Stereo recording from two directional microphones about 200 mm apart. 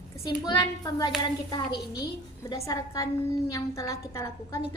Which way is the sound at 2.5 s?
15° left (ahead or behind).